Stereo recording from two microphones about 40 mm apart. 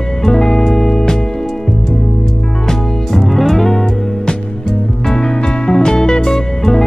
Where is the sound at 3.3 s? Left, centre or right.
Centre.